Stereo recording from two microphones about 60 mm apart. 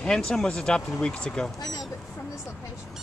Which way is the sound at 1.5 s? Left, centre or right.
Left.